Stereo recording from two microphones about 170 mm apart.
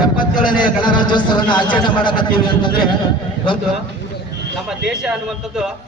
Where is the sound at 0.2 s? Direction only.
30° left (ahead or behind).